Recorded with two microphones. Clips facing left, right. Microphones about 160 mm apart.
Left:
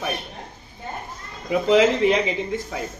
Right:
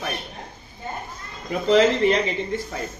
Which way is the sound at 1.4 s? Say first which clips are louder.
Left 1 dB; 10° left (ahead or behind).